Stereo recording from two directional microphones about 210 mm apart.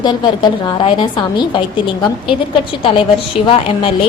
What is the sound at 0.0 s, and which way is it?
A woman's voice, 20° left (ahead or behind).